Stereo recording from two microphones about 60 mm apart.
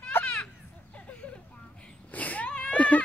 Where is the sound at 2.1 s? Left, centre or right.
Left.